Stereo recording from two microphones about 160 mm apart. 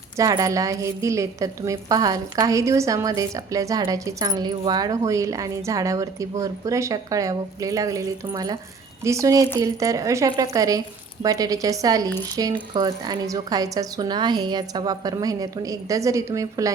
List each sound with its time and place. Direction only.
0.2 s a woman's voice: 20° right (ahead or behind)